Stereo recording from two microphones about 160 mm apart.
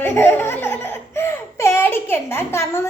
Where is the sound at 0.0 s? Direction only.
15° left (ahead or behind).